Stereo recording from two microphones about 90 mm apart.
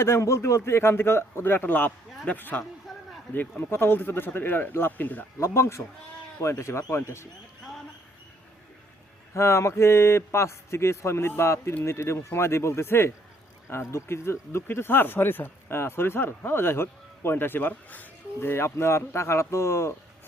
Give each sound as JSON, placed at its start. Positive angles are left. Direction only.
{"t": 0.0, "sound": "speech", "side_deg": 30}
{"t": 2.9, "sound": "a sound", "side_deg": 0}
{"t": 3.3, "sound": "speech", "side_deg": 25}
{"t": 5.4, "sound": "a man's voice", "side_deg": 30}
{"t": 9.3, "sound": "a man's voice", "side_deg": 30}